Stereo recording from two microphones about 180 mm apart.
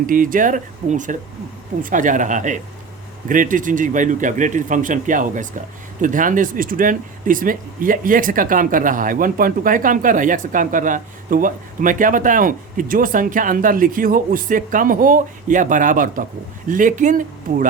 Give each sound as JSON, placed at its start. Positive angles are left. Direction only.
{"t": 0.0, "sound": "speech", "side_deg": -50}